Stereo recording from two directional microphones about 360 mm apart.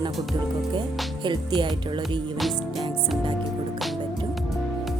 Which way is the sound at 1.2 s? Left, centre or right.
Centre.